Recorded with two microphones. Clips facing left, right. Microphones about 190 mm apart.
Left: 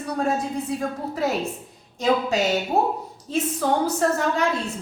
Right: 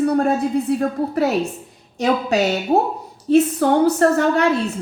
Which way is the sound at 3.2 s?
65° right (ahead or behind).